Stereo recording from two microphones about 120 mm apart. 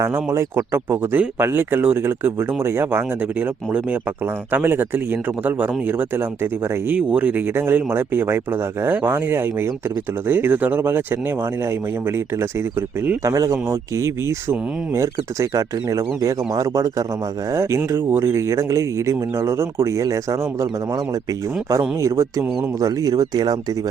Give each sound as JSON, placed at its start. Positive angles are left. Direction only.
{"t": 0.0, "sound": "speech", "side_deg": -20}